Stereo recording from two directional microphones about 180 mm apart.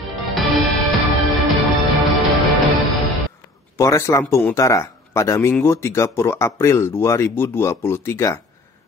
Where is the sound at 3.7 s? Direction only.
15° left (ahead or behind).